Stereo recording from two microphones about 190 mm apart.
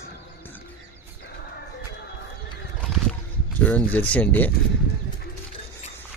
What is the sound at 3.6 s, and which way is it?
Speech, 10° left (ahead or behind).